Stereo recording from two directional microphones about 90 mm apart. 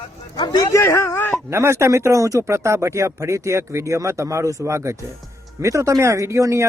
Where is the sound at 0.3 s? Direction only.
50° left (ahead or behind).